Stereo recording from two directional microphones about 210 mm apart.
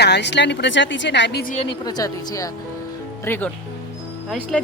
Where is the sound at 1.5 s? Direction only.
30° left (ahead or behind).